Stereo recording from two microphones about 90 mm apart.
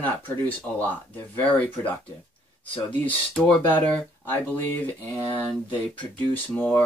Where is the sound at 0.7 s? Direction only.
15° left (ahead or behind).